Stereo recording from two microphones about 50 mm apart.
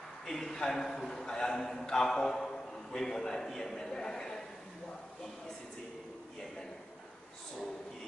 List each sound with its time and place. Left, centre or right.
0.3 s a man's voice: centre